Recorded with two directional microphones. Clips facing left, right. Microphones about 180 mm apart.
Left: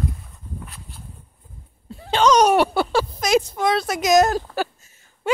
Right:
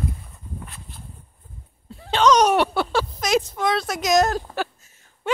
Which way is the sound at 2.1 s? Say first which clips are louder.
Left 1 dB; centre (ahead or behind).